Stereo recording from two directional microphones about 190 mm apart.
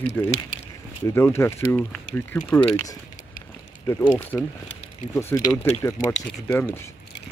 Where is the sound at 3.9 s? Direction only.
15° left (ahead or behind).